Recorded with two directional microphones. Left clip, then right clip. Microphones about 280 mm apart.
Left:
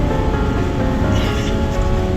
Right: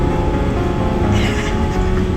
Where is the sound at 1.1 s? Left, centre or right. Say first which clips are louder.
Right 1 dB; centre.